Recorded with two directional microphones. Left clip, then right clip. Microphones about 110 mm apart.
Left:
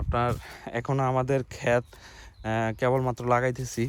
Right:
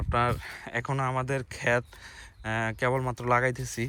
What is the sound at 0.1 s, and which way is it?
Speech, 45° left (ahead or behind).